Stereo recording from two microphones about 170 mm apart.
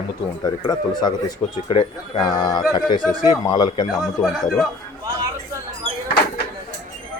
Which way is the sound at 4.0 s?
Centre (ahead or behind).